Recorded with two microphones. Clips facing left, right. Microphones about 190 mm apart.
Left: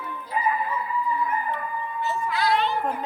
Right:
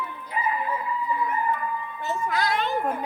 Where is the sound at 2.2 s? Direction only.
45° right (ahead or behind).